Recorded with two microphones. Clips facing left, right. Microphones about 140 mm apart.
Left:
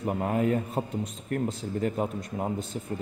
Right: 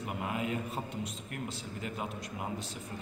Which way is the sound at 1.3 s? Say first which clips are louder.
Left 11 dB; 40° left (ahead or behind).